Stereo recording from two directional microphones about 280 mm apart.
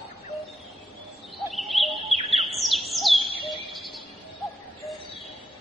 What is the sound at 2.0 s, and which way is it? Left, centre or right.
Bird, right.